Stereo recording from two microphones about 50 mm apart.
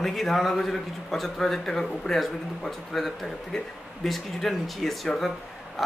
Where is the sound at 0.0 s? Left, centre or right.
Centre.